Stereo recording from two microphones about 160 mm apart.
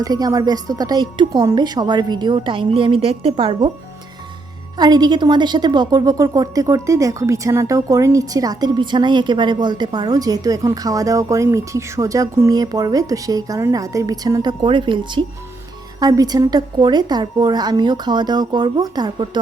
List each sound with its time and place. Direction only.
0.0 s a woman's voice: 25° right (ahead or behind)
4.8 s a woman's voice: 25° right (ahead or behind)